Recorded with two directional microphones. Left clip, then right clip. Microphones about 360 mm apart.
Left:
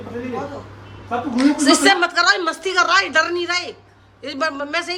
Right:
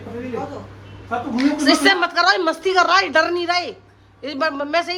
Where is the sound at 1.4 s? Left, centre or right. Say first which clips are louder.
Left 1 dB; centre.